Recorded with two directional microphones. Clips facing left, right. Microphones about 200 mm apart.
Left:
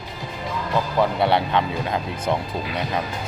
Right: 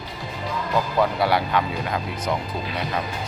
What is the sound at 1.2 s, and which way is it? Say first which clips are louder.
Speech: left 1 dB; 25° left (ahead or behind).